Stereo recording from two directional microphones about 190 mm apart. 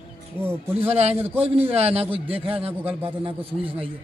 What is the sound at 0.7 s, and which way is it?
A man's voice, 35° right (ahead or behind).